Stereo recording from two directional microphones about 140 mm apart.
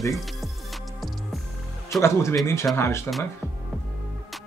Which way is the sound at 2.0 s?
20° left (ahead or behind).